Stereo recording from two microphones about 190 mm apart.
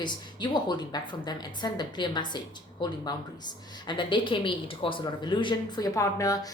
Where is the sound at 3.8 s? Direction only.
25° left (ahead or behind).